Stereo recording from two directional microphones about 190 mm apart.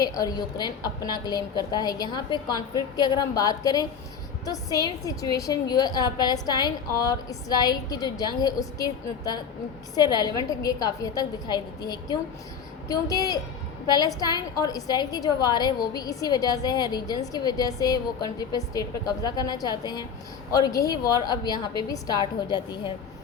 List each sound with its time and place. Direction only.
0.2 s a woman's voice: 20° left (ahead or behind)